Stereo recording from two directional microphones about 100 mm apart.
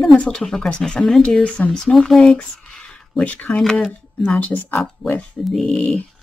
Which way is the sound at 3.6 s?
5° left (ahead or behind).